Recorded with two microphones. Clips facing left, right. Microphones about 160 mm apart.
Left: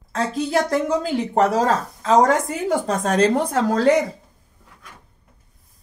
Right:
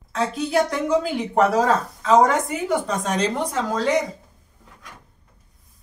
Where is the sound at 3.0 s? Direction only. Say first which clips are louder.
Left 5 dB; 50° left (ahead or behind).